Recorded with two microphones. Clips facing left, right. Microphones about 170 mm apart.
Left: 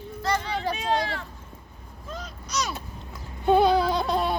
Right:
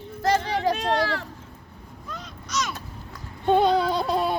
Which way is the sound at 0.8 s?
70° right (ahead or behind).